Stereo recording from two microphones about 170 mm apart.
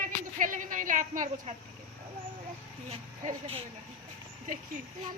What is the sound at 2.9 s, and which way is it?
Speech, 35° right (ahead or behind).